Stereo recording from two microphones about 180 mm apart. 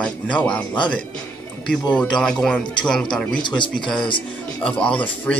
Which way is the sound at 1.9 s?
5° left (ahead or behind).